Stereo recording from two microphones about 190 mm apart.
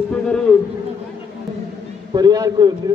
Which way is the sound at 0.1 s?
5° left (ahead or behind).